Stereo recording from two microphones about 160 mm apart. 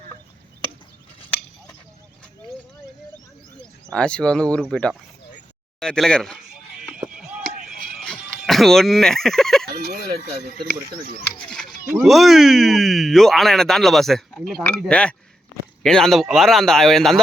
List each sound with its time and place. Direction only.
3.9 s speech: 5° left (ahead or behind)
7.1 s chop: 5° right (ahead or behind)
7.6 s music: centre (ahead or behind)
10.4 s speech: 70° right (ahead or behind)
11.4 s a sound: 5° left (ahead or behind)
12.0 s speech: centre (ahead or behind)